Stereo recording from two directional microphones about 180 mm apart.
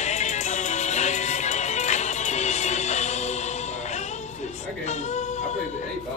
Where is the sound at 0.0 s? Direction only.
40° left (ahead or behind).